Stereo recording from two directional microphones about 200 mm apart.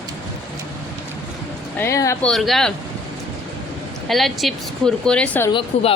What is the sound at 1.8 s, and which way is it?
Speech, 15° left (ahead or behind).